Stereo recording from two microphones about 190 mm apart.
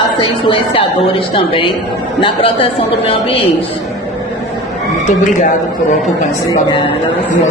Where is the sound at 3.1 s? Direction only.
30° left (ahead or behind).